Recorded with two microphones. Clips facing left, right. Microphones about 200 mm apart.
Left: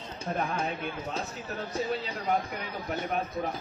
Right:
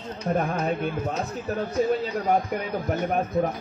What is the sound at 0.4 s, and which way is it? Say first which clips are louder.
Speech: right 5 dB; 55° right (ahead or behind).